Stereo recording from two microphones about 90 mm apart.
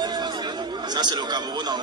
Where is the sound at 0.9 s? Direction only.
55° right (ahead or behind).